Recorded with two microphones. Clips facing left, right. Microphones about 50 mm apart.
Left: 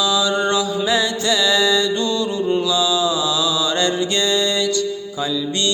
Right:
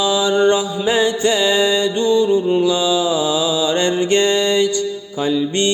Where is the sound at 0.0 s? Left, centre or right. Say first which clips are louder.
Right 4 dB; right.